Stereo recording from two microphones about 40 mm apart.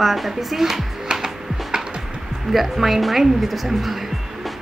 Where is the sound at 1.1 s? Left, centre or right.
Centre.